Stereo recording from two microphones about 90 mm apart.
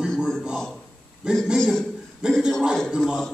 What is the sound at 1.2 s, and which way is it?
A man's voice, 10° right (ahead or behind).